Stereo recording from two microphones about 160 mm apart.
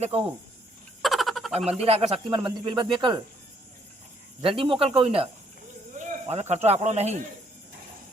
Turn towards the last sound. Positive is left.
turn(degrees=-45)  # may be behind; listen again after turning